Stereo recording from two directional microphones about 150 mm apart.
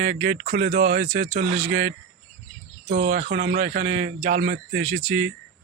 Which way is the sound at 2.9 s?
85° right.